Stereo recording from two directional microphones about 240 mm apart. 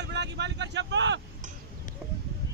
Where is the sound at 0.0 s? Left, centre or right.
Right.